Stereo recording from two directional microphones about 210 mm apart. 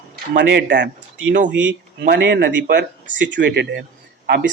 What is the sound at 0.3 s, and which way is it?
Speech, 55° right (ahead or behind).